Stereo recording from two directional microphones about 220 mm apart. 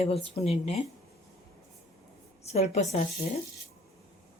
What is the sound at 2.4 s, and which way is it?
Speech, 30° left (ahead or behind).